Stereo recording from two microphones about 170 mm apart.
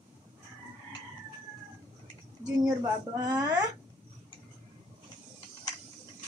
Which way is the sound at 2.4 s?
25° right (ahead or behind).